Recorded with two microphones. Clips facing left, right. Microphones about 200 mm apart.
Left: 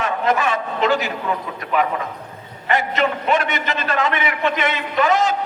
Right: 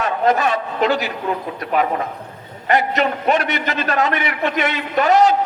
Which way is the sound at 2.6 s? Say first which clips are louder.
Right 2 dB; 40° right (ahead or behind).